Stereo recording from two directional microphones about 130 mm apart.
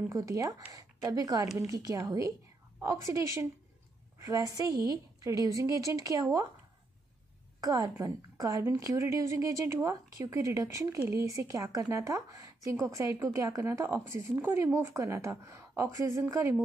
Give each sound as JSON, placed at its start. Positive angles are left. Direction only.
{"t": 0.1, "sound": "speech", "side_deg": -25}
{"t": 7.6, "sound": "speech", "side_deg": -30}